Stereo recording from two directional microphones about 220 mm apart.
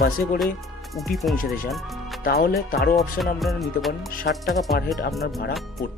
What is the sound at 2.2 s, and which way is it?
Speech, 40° left (ahead or behind).